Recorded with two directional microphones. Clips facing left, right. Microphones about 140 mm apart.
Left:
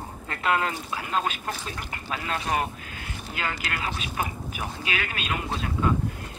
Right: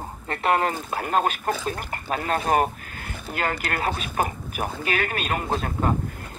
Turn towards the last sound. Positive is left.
turn(degrees=-45)  # may be behind; listen again after turning